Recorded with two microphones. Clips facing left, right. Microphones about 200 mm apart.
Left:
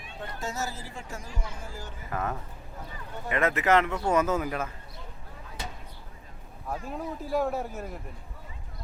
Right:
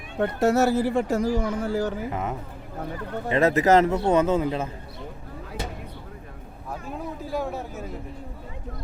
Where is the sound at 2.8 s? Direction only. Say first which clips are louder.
Right 11 dB; 65° right (ahead or behind).